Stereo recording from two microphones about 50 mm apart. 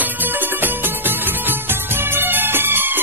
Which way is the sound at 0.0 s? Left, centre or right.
Right.